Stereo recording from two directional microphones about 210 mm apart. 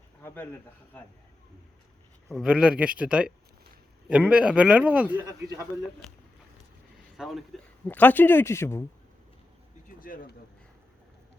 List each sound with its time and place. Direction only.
0.2 s a sound: 10° left (ahead or behind)
2.3 s a man's voice: centre (ahead or behind)
7.2 s speech: centre (ahead or behind)
10.0 s speech: 40° left (ahead or behind)